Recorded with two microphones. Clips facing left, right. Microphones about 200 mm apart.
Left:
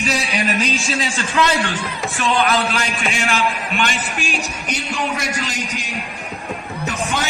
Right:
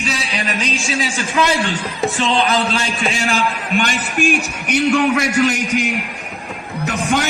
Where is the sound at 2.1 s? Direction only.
30° right (ahead or behind).